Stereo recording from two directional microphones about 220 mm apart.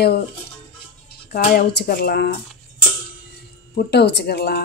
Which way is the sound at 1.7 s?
50° left (ahead or behind).